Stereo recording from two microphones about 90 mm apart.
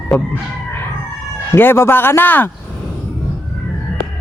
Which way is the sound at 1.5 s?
25° left (ahead or behind).